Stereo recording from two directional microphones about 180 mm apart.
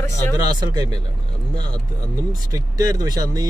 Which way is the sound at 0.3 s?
20° right (ahead or behind).